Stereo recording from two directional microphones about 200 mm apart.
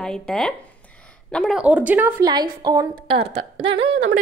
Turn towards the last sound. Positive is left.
turn(degrees=-25)  # may be behind; listen again after turning